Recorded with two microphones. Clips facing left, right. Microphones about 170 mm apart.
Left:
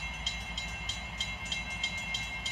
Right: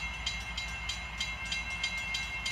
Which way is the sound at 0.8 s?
40° left (ahead or behind).